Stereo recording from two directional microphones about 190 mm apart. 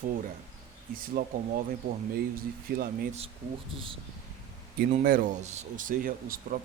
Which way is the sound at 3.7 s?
30° right (ahead or behind).